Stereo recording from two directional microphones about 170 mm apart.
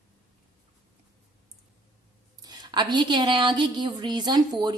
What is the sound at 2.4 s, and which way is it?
A woman's voice, 25° right (ahead or behind).